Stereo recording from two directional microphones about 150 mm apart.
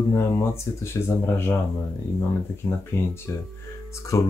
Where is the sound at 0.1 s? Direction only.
15° left (ahead or behind).